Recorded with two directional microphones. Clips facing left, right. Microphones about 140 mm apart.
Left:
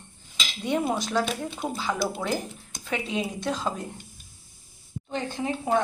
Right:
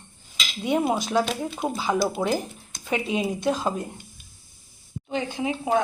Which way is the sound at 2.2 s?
30° right (ahead or behind).